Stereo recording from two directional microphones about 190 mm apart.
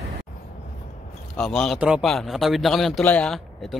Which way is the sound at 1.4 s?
Centre (ahead or behind).